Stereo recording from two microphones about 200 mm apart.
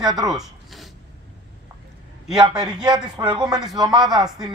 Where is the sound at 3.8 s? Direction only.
20° right (ahead or behind).